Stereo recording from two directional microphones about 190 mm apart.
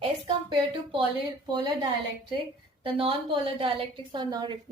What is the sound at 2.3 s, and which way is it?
A woman's voice, 30° right (ahead or behind).